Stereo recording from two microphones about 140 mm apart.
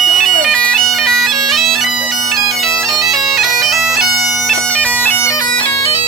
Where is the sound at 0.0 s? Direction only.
5° left (ahead or behind); by 5.5 s 20° left (ahead or behind).